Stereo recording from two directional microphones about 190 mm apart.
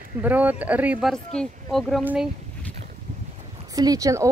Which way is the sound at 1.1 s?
5° left (ahead or behind).